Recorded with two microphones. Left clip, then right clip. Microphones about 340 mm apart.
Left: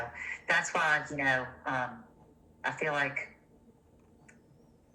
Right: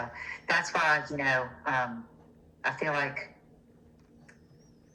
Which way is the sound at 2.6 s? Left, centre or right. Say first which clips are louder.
Right 1 dB; centre.